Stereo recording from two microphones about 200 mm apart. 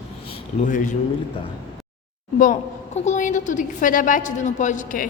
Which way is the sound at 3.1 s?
40° left (ahead or behind).